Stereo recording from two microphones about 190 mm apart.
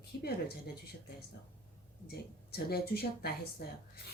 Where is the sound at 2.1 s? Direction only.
55° left (ahead or behind).